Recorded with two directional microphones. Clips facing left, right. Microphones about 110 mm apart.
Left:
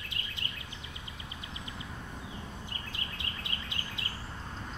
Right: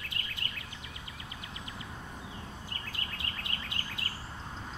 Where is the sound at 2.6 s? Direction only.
20° left (ahead or behind).